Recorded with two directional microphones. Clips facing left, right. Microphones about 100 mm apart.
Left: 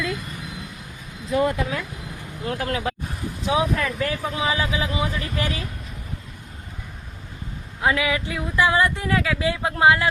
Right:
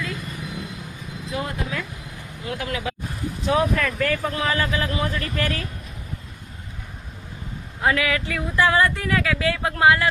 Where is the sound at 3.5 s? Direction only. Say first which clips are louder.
Right 1 dB; 10° left (ahead or behind).